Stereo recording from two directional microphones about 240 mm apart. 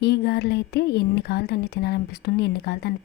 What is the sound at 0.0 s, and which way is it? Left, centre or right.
Speech, left.